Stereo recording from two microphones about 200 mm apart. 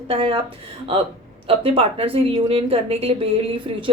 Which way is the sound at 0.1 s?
25° right (ahead or behind).